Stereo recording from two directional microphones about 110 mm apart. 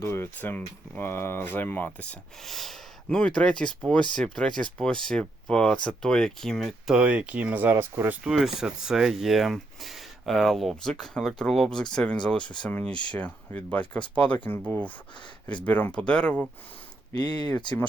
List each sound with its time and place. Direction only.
0.0 s speech: 20° left (ahead or behind); by 8.1 s 20° right (ahead or behind)
8.2 s speech: 5° right (ahead or behind); by 14.6 s 15° left (ahead or behind)
15.6 s speech: 15° left (ahead or behind)
17.1 s speech: 40° left (ahead or behind)